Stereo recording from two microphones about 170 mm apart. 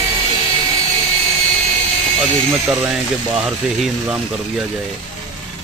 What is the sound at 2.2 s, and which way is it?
Speech, 5° right (ahead or behind).